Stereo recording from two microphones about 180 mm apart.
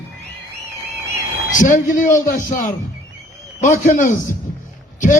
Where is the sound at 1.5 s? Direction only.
45° left (ahead or behind).